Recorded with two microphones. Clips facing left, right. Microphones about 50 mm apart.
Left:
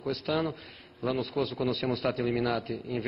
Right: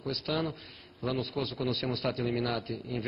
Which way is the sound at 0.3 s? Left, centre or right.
Centre.